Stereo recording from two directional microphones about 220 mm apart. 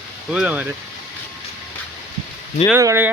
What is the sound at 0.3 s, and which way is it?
Speech, 5° right (ahead or behind).